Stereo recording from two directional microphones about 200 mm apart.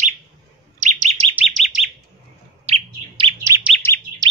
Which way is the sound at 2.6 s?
25° right (ahead or behind).